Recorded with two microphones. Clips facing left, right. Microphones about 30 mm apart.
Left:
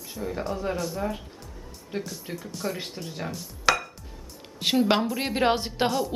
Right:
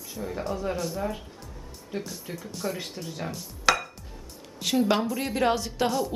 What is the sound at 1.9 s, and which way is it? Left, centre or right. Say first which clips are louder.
Speech: left 1 dB; left.